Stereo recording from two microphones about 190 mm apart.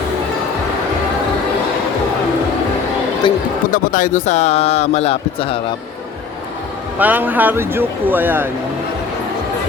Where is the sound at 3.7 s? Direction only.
45° left (ahead or behind).